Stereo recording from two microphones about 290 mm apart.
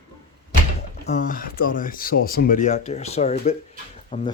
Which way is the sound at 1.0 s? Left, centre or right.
Left.